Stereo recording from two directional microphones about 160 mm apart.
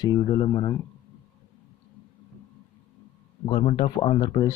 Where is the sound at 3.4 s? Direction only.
35° left (ahead or behind).